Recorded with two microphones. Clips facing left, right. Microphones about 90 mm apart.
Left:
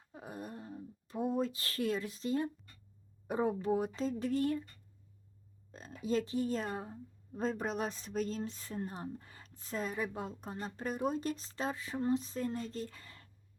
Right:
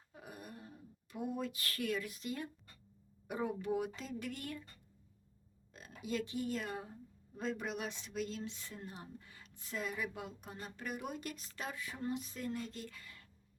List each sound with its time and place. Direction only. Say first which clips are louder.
0.1 s speech: left 6 dB; 30° left (ahead or behind)
5.7 s speech: left 6 dB; 35° left (ahead or behind)